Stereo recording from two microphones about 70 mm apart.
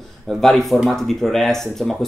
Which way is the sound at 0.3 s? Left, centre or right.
Centre.